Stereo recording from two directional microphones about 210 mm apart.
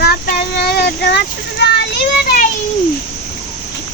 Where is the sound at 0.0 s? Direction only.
45° left (ahead or behind).